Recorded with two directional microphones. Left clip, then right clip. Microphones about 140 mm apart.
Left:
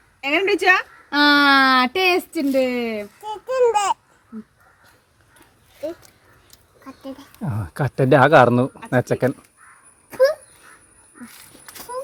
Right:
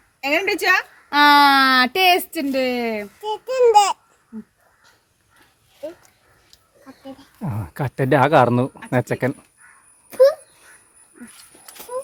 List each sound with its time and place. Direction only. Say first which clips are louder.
0.2 s a sound: left 1 dB; 60° right (ahead or behind)
3.2 s a child's voice: right 2 dB; 25° right (ahead or behind)
5.8 s speech: left 4 dB; 40° left (ahead or behind)
7.3 s speech: left 1 dB; centre (ahead or behind)